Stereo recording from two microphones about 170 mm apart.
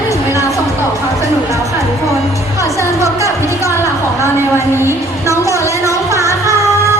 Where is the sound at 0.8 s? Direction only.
15° right (ahead or behind).